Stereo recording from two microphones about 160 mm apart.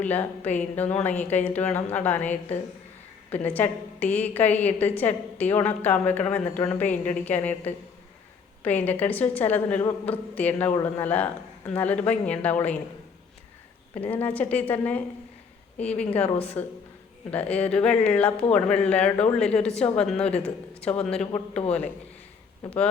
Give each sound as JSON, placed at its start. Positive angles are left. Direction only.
{"t": 0.0, "sound": "a woman's voice", "side_deg": 10}
{"t": 13.9, "sound": "a woman's voice", "side_deg": 10}
{"t": 21.3, "sound": "a man's voice", "side_deg": 40}